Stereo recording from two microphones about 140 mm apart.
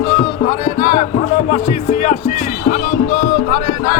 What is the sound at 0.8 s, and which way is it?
Music, 40° left (ahead or behind).